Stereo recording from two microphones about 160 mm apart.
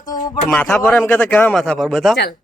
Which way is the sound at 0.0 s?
25° left (ahead or behind).